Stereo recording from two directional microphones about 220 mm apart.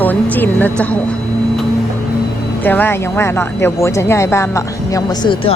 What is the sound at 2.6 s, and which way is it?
Speech, 10° left (ahead or behind).